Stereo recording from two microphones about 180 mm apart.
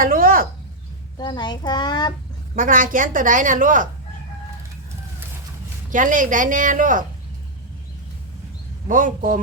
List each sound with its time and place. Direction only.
0.0 s a sound: 50° right (ahead or behind)
1.2 s a child's voice: 25° left (ahead or behind)
2.6 s a woman's voice: 50° right (ahead or behind)
5.9 s a woman's voice: 45° right (ahead or behind)
8.9 s a woman's voice: 50° right (ahead or behind)